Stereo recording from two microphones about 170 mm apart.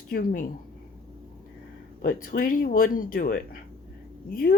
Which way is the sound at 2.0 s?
55° left (ahead or behind).